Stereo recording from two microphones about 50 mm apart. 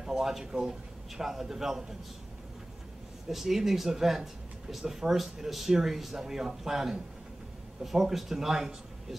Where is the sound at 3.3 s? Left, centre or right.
Centre.